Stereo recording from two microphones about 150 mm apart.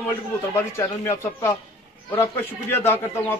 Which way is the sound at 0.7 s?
20° left (ahead or behind).